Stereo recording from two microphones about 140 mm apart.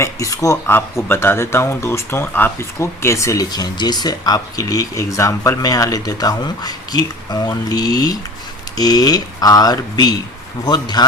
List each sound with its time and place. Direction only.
0.0 s speech: 25° left (ahead or behind)